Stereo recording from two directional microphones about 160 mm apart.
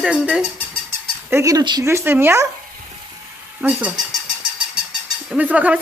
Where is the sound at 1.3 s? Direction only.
20° right (ahead or behind).